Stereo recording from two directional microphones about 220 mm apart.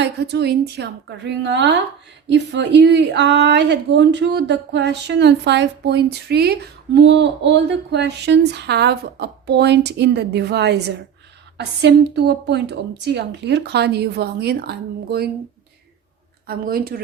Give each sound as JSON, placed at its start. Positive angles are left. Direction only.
{"t": 0.0, "sound": "speech", "side_deg": -50}
{"t": 16.5, "sound": "speech", "side_deg": -45}